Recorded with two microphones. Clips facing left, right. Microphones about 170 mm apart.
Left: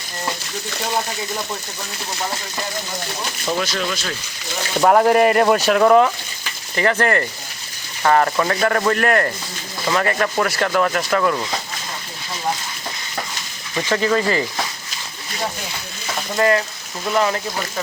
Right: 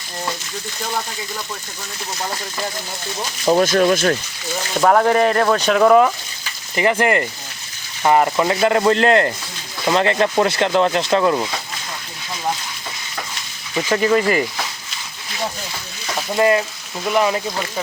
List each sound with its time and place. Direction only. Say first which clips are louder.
3.4 s speech: right 9 dB; 45° right (ahead or behind)
4.8 s speech: left 1 dB; 5° left (ahead or behind)
6.7 s speech: right 1 dB; 15° right (ahead or behind)
13.9 s speech: right 2 dB; 20° right (ahead or behind)
16.3 s speech: right 2 dB; 20° right (ahead or behind)